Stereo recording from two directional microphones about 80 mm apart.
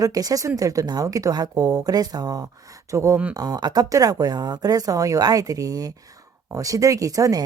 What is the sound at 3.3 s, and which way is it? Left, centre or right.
Speech, right.